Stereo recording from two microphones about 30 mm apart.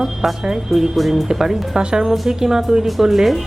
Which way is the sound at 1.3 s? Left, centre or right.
Centre.